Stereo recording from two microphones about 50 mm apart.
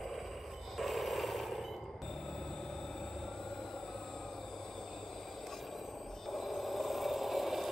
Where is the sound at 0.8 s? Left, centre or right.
Centre.